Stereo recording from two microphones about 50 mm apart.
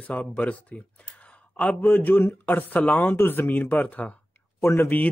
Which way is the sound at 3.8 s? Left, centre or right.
Left.